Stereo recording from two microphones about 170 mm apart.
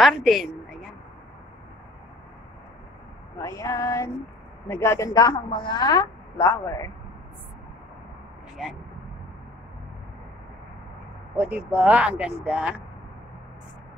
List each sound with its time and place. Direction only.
0.0 s a woman's voice: centre (ahead or behind)
3.3 s a sound: 20° left (ahead or behind)
4.6 s a woman's voice: 15° left (ahead or behind)
8.6 s a woman's voice: 5° right (ahead or behind)
11.3 s speech: 10° right (ahead or behind)